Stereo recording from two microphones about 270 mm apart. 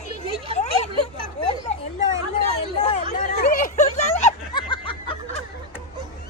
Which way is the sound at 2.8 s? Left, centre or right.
Left.